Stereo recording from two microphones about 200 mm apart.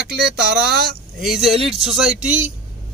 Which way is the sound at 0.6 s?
50° right (ahead or behind).